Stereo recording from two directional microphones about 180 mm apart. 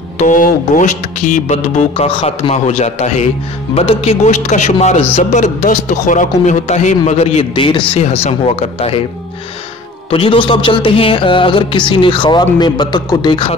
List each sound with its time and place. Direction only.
0.2 s a man's voice: 45° left (ahead or behind)
10.1 s speech: 30° left (ahead or behind)